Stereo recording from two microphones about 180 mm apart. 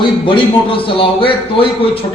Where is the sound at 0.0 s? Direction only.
30° left (ahead or behind).